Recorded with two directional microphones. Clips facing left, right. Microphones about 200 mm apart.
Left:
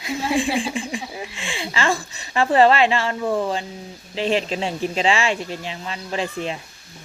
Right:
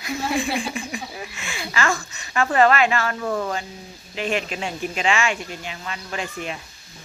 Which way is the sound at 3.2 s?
15° left (ahead or behind).